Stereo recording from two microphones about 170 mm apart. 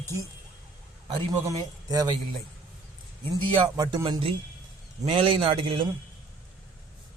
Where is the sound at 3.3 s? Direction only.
25° right (ahead or behind).